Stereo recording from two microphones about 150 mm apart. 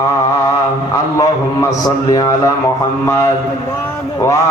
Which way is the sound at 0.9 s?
20° left (ahead or behind).